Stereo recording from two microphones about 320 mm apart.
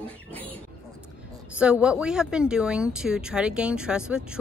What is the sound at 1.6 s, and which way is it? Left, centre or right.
Speech, centre.